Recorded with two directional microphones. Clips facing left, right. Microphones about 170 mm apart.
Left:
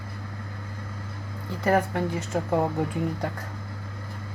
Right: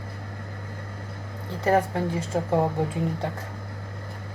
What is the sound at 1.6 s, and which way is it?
Speech, 30° right (ahead or behind).